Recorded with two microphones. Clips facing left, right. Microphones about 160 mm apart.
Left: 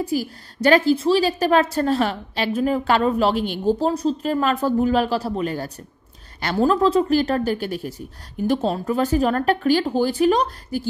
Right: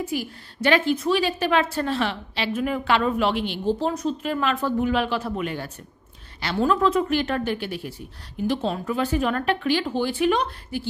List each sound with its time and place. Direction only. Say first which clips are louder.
0.0 s a woman's voice: left 4 dB; 35° left (ahead or behind)